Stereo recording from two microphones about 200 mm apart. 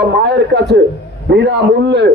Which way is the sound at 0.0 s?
60° right (ahead or behind).